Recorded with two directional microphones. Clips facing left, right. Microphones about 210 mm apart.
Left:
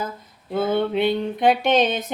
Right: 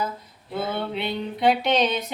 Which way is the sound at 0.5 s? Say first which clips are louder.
Left 7 dB; 50° left (ahead or behind).